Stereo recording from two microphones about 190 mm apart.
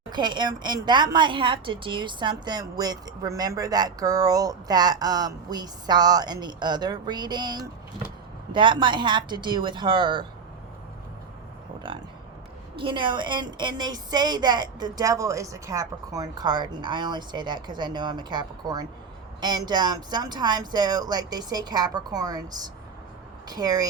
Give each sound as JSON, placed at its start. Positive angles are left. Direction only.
{"t": 0.1, "sound": "a woman's voice", "side_deg": -25}
{"t": 11.9, "sound": "a sound", "side_deg": -25}
{"t": 12.7, "sound": "a woman's voice", "side_deg": -25}